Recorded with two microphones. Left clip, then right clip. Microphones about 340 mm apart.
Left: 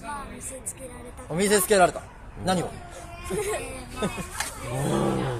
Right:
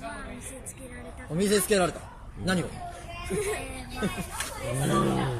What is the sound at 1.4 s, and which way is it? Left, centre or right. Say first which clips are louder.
Speech: left 5 dB; centre.